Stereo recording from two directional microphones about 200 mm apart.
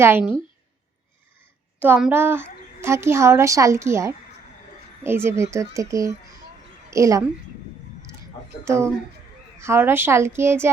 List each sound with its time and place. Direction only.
0.0 s a woman's voice: 10° right (ahead or behind)
1.8 s a woman's voice: 5° right (ahead or behind)
8.6 s a woman's voice: 15° right (ahead or behind)